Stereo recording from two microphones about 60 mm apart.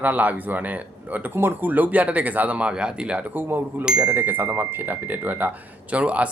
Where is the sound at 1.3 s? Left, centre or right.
Right.